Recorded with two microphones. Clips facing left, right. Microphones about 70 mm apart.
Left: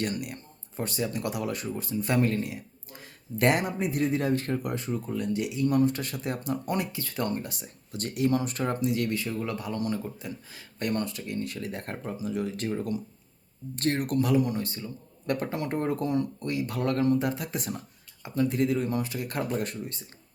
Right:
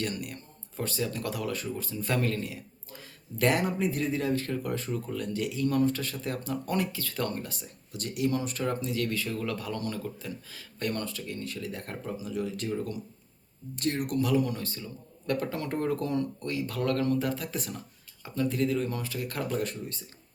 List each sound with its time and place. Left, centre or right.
0.0 s speech: left
4.1 s speech: left
4.6 s speech: centre
7.9 s speech: left
13.7 s speech: left
15.5 s speech: centre